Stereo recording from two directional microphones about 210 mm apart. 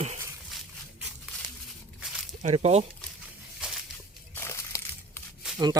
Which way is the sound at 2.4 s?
30° right (ahead or behind).